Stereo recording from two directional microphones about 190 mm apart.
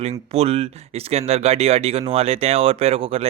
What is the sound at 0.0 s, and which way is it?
Speech, 30° right (ahead or behind).